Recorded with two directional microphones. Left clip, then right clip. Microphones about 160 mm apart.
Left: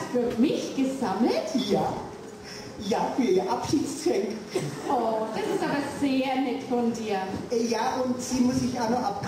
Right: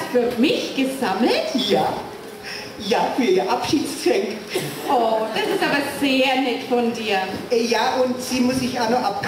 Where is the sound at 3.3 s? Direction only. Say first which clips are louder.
Right 5 dB; 20° right (ahead or behind).